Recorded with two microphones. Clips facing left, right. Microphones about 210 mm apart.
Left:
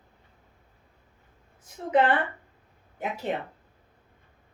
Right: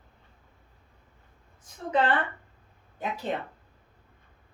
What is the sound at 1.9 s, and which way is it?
Speech, 20° left (ahead or behind).